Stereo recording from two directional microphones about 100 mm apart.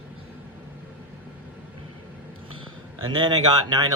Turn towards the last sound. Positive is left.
turn(degrees=-40)  # may be behind; listen again after turning